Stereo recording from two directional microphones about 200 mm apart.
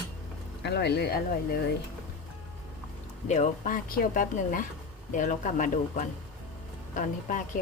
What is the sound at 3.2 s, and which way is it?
Speech, 35° left (ahead or behind).